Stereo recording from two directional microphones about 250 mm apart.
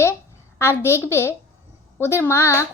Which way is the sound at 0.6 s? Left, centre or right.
Centre.